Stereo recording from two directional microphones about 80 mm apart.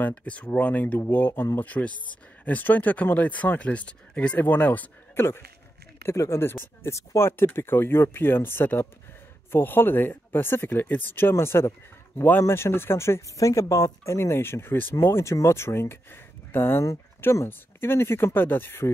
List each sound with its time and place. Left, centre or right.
0.0 s speech: centre
6.0 s speech: left